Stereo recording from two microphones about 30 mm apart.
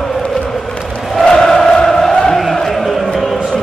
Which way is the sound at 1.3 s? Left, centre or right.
Centre.